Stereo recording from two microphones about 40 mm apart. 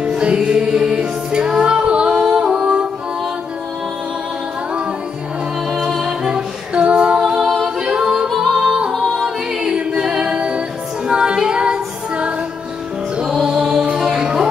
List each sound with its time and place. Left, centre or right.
0.0 s music: right
6.0 s music: right
7.2 s a capella: centre
8.3 s yodeling: centre
8.5 s music: right
9.0 s a capella: centre
11.1 s music: right